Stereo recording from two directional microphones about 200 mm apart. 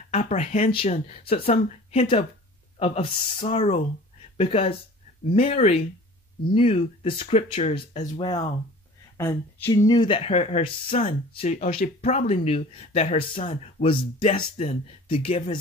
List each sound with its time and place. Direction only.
0.1 s speech: 30° left (ahead or behind)
9.1 s speech: 15° left (ahead or behind)